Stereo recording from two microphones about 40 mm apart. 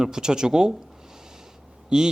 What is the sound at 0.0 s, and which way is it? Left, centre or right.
Speech, centre.